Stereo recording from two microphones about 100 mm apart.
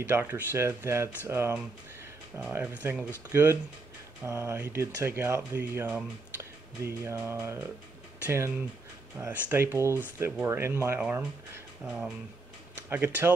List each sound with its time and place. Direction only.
0.1 s speech: 25° right (ahead or behind)
4.2 s speech: 25° right (ahead or behind)
12.9 s speech: 20° right (ahead or behind)